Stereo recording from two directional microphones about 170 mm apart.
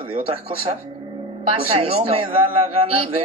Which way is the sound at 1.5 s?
35° right (ahead or behind).